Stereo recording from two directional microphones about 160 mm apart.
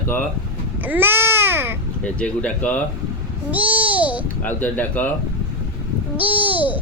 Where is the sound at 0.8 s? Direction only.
10° right (ahead or behind).